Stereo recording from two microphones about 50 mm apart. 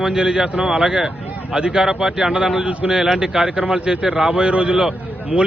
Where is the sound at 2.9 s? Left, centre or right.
Centre.